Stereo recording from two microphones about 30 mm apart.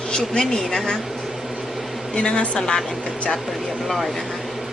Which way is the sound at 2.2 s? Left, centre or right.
Left.